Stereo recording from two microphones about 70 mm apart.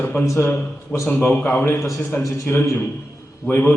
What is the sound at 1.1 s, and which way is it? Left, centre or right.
A man's voice, left.